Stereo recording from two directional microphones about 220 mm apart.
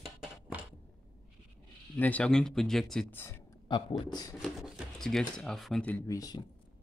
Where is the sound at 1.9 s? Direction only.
5° left (ahead or behind).